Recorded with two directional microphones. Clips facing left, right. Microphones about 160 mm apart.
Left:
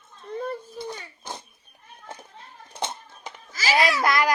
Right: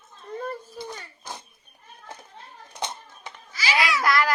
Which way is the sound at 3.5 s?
40° left (ahead or behind).